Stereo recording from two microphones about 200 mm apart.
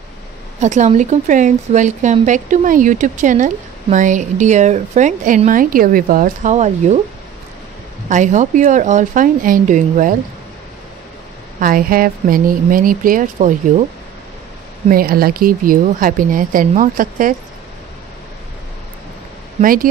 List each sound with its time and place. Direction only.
0.6 s a woman's voice: 35° right (ahead or behind)
8.1 s a woman's voice: 40° right (ahead or behind)
11.6 s speech: 45° right (ahead or behind)
14.9 s speech: 45° right (ahead or behind)
19.6 s speech: 45° right (ahead or behind)